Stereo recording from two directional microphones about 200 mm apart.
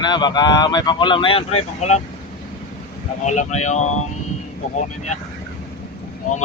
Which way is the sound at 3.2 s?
35° left (ahead or behind).